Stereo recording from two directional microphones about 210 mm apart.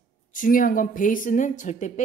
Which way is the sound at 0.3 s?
40° left (ahead or behind).